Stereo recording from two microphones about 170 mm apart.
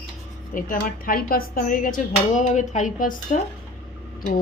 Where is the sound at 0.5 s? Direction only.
55° left (ahead or behind).